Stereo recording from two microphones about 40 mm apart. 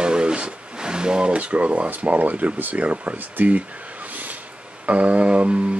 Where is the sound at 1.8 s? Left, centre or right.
Right.